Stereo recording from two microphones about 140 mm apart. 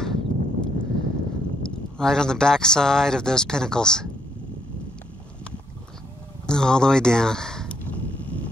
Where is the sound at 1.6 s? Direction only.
5° left (ahead or behind).